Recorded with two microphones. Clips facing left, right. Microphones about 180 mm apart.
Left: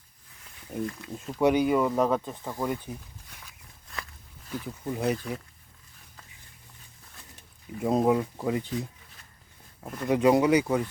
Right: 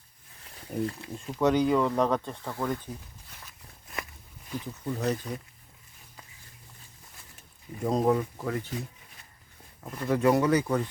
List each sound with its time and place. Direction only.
0.5 s speech: 30° right (ahead or behind)
1.1 s speech: 5° left (ahead or behind)
4.6 s speech: 10° left (ahead or behind)
7.8 s speech: 5° left (ahead or behind)